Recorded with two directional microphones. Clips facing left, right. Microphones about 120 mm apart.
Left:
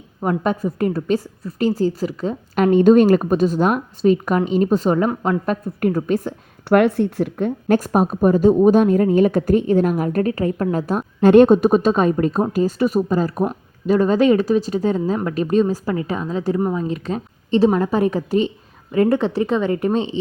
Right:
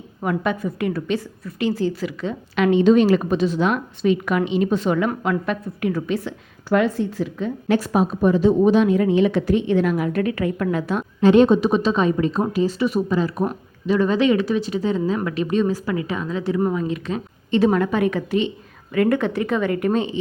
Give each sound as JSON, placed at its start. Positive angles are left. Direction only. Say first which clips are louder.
{"t": 0.2, "sound": "a woman's voice", "louder": "left 3 dB", "side_deg": 35}
{"t": 6.7, "sound": "a woman's voice", "louder": "left 4 dB", "side_deg": 65}